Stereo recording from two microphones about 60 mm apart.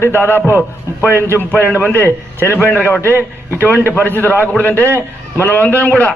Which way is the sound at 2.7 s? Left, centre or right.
Left.